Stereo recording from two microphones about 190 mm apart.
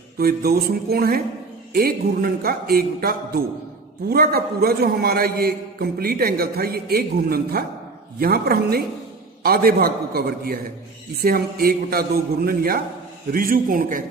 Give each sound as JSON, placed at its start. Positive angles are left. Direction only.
{"t": 0.2, "sound": "a man's voice", "side_deg": -55}